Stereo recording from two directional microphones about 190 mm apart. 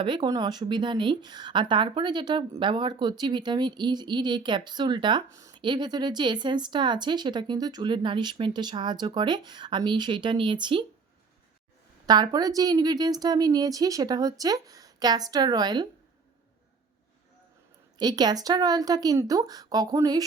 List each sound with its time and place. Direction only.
0.0 s a woman's voice: 25° right (ahead or behind)
12.0 s a woman's voice: 20° right (ahead or behind)
17.9 s a woman's voice: 20° right (ahead or behind)